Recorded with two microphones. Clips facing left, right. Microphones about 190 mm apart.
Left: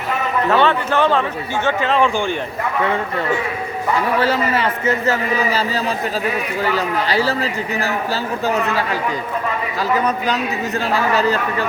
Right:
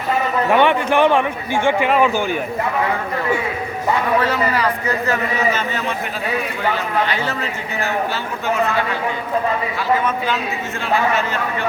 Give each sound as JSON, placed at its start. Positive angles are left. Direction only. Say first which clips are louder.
{"t": 0.5, "sound": "a man's voice", "louder": "right 2 dB", "side_deg": -15}
{"t": 4.2, "sound": "a man's voice", "louder": "left 1 dB", "side_deg": 25}
{"t": 10.0, "sound": "a man's voice", "louder": "left 2 dB", "side_deg": 40}